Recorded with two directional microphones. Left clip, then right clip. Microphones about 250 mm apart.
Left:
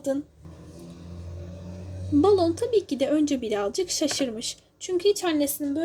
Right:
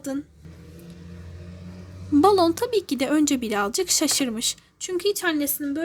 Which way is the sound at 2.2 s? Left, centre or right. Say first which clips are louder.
Right 3 dB; right.